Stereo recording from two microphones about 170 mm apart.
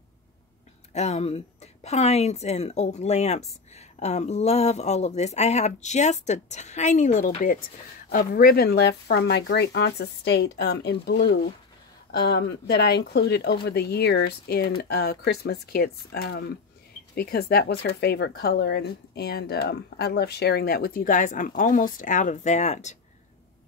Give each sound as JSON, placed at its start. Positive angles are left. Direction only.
{"t": 0.9, "sound": "speech", "side_deg": 40}
{"t": 8.1, "sound": "speech", "side_deg": 55}
{"t": 12.1, "sound": "speech", "side_deg": 70}